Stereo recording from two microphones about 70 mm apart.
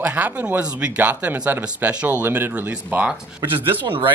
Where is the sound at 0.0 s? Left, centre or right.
Right.